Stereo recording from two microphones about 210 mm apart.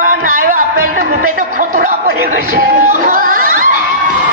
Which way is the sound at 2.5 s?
40° right (ahead or behind).